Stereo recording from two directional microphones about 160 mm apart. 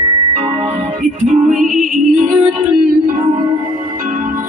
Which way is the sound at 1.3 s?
55° right (ahead or behind).